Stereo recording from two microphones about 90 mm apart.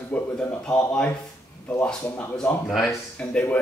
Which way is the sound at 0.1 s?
15° left (ahead or behind).